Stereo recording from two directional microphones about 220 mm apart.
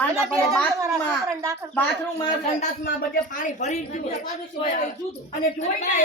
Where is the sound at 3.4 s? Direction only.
30° left (ahead or behind).